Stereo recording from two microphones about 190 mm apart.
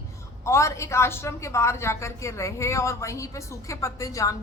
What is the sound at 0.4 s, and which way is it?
A woman's voice, 15° left (ahead or behind).